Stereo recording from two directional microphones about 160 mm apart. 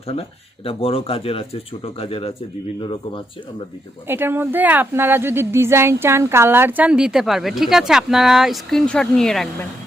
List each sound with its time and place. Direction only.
0.1 s speech: 35° left (ahead or behind)
4.0 s a woman's voice: 15° right (ahead or behind); by 9.5 s centre (ahead or behind)